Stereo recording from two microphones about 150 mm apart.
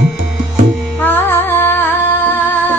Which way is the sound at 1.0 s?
15° left (ahead or behind).